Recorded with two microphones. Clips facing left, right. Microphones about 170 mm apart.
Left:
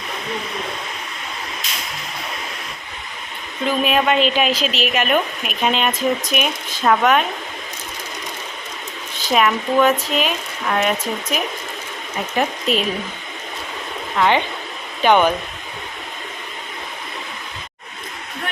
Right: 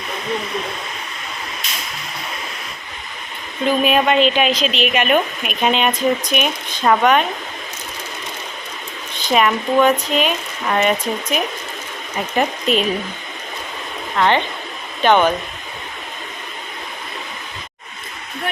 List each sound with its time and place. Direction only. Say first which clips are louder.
3.7 s a woman's voice: right 2 dB; centre (ahead or behind)
9.1 s a woman's voice: right 1 dB; centre (ahead or behind)
14.2 s speech: right 1 dB; 10° left (ahead or behind)